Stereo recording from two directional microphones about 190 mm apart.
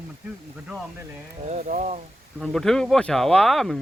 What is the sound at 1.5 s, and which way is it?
Speech, 40° right (ahead or behind).